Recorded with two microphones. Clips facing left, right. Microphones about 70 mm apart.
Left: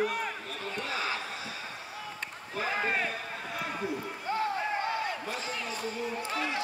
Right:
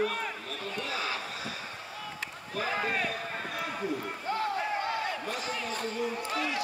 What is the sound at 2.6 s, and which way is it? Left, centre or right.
Speech, left.